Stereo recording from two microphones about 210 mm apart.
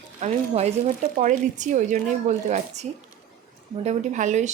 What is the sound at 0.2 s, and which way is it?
Speech, 30° right (ahead or behind).